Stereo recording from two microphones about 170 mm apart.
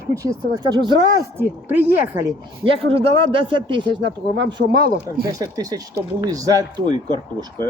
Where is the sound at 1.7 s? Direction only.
10° right (ahead or behind).